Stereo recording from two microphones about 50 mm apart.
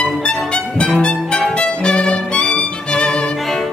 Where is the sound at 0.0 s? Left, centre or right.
Left.